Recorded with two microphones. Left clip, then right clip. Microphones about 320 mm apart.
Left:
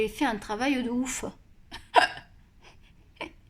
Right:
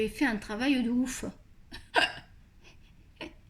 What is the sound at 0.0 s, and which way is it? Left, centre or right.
Speech, centre.